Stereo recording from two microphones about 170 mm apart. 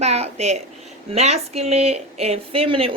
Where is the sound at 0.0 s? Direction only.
40° right (ahead or behind).